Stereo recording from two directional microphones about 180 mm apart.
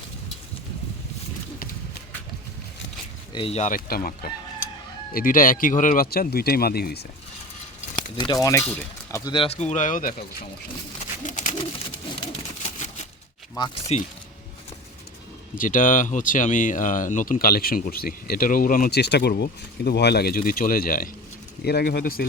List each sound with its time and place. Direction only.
3.3 s speech: 35° left (ahead or behind); by 7.0 s 60° left (ahead or behind)
8.1 s speech: 25° left (ahead or behind)
9.2 s speech: 30° left (ahead or behind); by 10.2 s 50° left (ahead or behind)
11.2 s bird: 45° left (ahead or behind)
12.6 s a sound: 40° left (ahead or behind)
13.6 s speech: 35° left (ahead or behind)
15.5 s speech: 50° left (ahead or behind)